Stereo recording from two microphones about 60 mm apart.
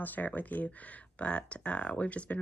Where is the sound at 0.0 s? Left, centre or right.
Left.